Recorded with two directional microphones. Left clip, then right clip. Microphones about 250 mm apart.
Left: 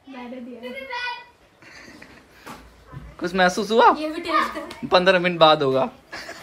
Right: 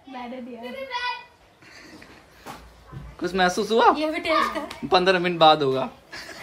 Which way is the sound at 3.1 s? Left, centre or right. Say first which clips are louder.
Left 2 dB; centre.